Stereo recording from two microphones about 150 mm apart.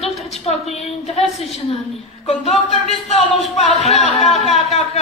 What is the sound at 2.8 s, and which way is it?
Speech, 45° left (ahead or behind).